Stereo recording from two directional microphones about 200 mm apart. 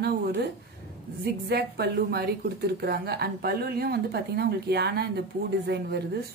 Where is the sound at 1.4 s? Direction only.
55° right (ahead or behind).